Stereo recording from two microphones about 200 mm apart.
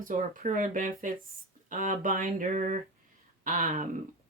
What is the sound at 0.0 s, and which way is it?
Speech, 40° right (ahead or behind).